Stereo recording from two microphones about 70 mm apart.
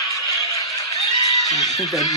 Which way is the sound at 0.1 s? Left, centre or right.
Left.